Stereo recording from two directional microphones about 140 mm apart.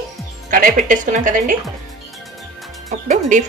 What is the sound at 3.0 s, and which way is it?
Chicken, 65° right (ahead or behind).